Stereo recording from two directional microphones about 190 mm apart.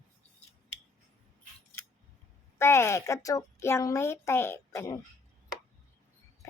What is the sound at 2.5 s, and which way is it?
A child's voice, 15° left (ahead or behind).